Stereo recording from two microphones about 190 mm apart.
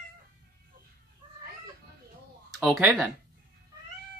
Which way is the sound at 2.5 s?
5° right (ahead or behind).